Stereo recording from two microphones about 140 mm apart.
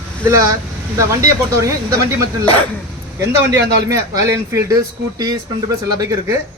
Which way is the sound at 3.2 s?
20° right (ahead or behind).